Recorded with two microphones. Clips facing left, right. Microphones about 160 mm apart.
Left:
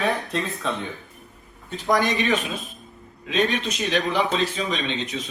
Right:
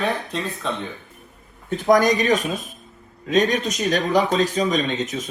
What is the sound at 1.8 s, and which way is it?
Speech, 45° right (ahead or behind).